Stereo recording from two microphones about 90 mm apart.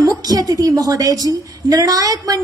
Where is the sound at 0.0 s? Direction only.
45° right (ahead or behind).